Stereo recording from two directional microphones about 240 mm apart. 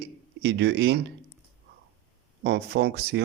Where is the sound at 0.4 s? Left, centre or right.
Right.